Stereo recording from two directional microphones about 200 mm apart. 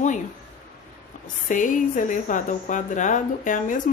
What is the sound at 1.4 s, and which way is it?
A woman's voice, 40° left (ahead or behind).